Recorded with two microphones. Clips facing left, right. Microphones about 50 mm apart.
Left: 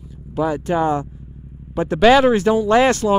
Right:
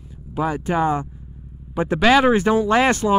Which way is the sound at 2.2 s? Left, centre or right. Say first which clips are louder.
Left 1 dB; centre.